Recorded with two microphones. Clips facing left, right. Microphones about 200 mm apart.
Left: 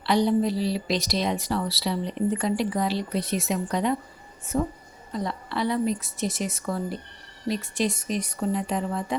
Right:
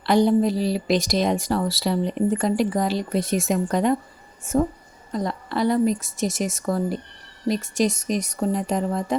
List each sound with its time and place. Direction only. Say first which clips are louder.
0.0 s speech: right 4 dB; 45° right (ahead or behind)